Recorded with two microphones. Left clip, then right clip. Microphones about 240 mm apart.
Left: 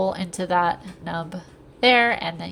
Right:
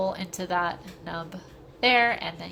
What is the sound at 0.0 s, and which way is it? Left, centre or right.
A woman's voice, centre.